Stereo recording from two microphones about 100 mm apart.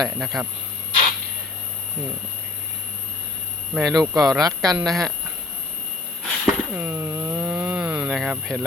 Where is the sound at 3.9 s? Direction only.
35° right (ahead or behind).